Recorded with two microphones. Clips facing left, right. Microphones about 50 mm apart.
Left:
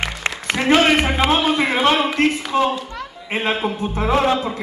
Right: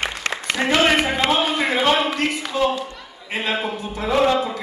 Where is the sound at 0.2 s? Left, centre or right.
Left.